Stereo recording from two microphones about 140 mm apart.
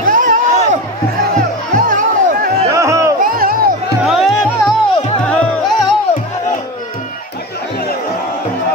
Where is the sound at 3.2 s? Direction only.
90° right.